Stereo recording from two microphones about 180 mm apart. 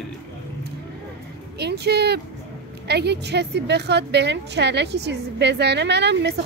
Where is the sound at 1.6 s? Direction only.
65° right (ahead or behind).